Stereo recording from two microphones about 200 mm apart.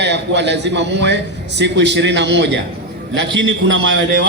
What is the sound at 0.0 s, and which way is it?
A man's voice, 60° right (ahead or behind).